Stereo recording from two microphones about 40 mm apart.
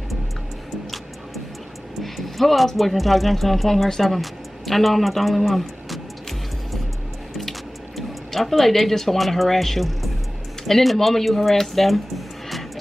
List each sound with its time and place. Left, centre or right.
2.0 s a man's voice: centre
8.3 s speech: centre